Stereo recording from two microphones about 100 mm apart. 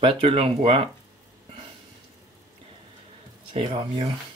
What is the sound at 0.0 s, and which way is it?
Speech, 65° right (ahead or behind).